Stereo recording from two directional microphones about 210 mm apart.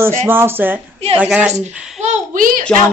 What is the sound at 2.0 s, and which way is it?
Speech, 35° right (ahead or behind).